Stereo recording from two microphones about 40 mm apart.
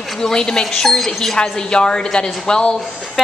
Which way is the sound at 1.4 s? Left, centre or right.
Left.